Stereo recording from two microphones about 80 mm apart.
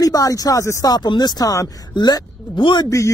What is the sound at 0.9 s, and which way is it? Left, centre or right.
Speech, left.